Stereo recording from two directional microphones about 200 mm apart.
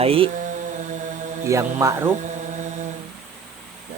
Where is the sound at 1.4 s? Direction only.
15° right (ahead or behind).